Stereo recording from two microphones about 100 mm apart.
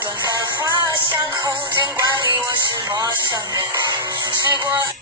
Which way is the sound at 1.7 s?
50° right (ahead or behind).